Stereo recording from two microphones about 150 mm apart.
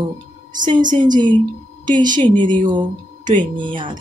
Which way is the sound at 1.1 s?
30° right (ahead or behind).